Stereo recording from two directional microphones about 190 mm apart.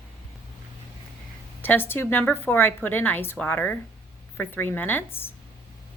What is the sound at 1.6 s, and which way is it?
A woman's voice, 10° left (ahead or behind).